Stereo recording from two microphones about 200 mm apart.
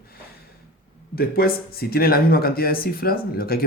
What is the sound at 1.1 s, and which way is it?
Speech, 50° left (ahead or behind).